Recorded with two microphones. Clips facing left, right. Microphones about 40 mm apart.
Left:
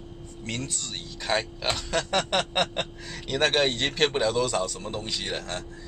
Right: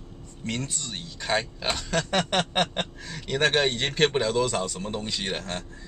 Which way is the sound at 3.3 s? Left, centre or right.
Centre.